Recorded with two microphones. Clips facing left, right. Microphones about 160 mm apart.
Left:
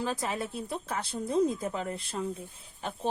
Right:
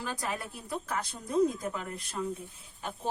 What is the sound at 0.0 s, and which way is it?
A woman's voice, 25° left (ahead or behind).